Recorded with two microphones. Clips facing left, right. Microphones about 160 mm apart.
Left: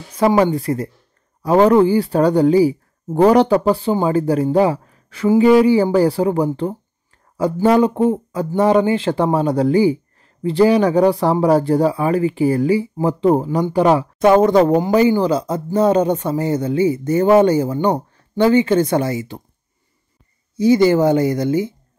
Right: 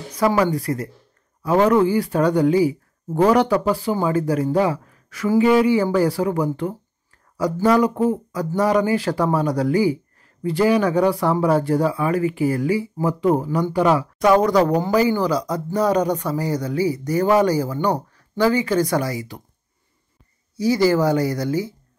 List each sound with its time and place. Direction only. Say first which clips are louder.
0.4 s speech: left 4 dB; 25° left (ahead or behind)
20.5 s speech: left 5 dB; 20° left (ahead or behind)